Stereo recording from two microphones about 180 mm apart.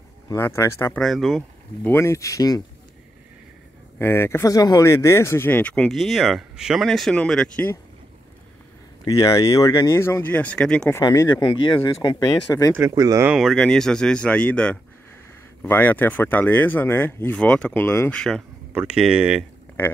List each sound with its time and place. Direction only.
0.3 s speech: 15° left (ahead or behind)
1.0 s speech: centre (ahead or behind)
1.9 s speech: 15° left (ahead or behind)
4.0 s speech: 15° left (ahead or behind)
9.0 s speech: 20° left (ahead or behind)
11.0 s speech: 20° left (ahead or behind)
12.7 s speech: 20° right (ahead or behind)
13.3 s speech: centre (ahead or behind)
18.7 s speech: 5° right (ahead or behind)